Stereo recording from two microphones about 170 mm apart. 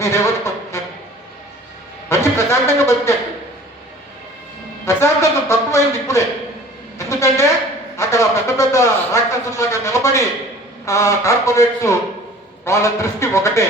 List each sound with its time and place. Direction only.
0.0 s speech: 15° left (ahead or behind)
2.0 s a man's voice: 15° left (ahead or behind)
4.9 s a man's voice: 15° left (ahead or behind)